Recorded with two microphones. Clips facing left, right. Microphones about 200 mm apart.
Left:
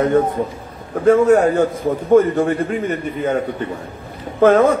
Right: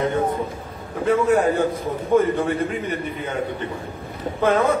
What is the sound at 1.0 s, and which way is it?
A man's voice, 45° left (ahead or behind).